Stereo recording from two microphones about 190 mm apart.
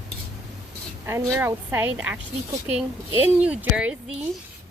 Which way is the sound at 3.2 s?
10° right (ahead or behind).